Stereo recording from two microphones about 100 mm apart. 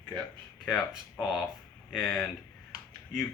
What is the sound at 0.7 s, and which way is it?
Speech, centre (ahead or behind).